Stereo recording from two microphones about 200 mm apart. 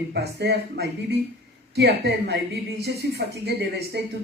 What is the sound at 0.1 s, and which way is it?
Speech, 55° right (ahead or behind).